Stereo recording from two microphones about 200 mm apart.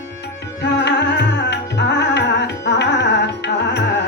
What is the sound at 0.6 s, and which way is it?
Music, 60° left (ahead or behind).